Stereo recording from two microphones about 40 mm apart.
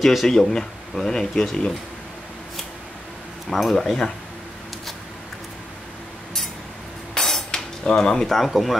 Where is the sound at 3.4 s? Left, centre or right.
Centre.